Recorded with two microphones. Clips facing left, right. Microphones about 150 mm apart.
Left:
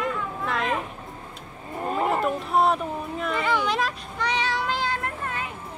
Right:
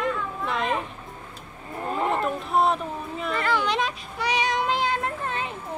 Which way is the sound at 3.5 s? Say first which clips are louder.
Right 1 dB; 10° left (ahead or behind).